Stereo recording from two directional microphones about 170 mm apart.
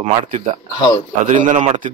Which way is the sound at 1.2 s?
45° right (ahead or behind).